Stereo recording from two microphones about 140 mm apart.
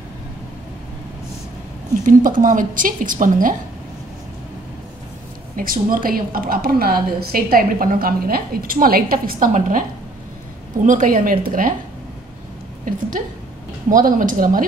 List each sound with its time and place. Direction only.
2.0 s a woman's voice: 75° right (ahead or behind)
5.6 s a woman's voice: 90° right
12.9 s a woman's voice: 75° right (ahead or behind)